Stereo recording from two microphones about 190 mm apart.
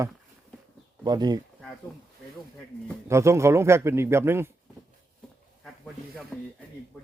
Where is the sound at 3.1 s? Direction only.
15° right (ahead or behind).